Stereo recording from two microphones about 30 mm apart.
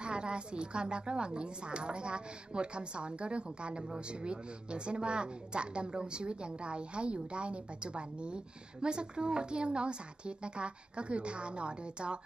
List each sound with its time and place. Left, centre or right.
0.0 s a woman's voice: right